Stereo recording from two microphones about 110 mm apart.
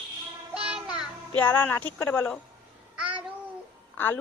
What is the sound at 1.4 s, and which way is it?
Speech, 15° left (ahead or behind).